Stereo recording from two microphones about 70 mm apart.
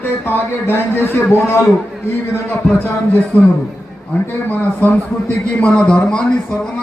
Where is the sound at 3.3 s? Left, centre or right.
Left.